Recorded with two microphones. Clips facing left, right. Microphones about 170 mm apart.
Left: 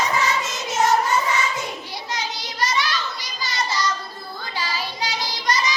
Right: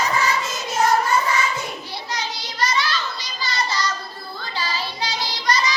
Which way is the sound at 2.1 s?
20° left (ahead or behind).